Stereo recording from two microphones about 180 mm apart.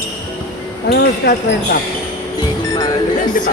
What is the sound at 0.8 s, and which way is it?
Speech, 60° left (ahead or behind).